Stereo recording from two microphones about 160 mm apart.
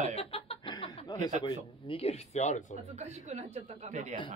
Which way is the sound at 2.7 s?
45° right (ahead or behind).